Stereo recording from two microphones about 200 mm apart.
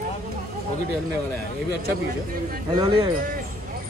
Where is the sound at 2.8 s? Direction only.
25° right (ahead or behind).